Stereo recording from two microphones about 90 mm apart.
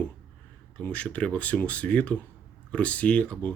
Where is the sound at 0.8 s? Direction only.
15° left (ahead or behind).